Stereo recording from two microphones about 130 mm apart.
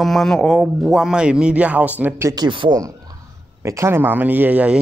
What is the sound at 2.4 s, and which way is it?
Speech, 35° right (ahead or behind).